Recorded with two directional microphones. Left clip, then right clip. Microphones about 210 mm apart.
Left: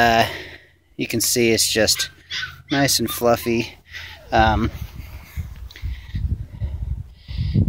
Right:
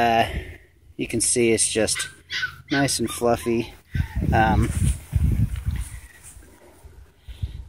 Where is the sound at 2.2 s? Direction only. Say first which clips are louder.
Right 1 dB; 40° right (ahead or behind).